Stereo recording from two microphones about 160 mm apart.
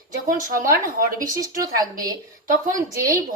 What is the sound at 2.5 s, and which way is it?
Speech, 55° right (ahead or behind).